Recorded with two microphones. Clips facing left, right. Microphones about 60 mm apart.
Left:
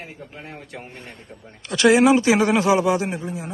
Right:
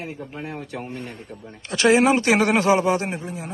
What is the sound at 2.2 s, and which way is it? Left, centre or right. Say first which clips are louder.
Speech: left 1 dB; right.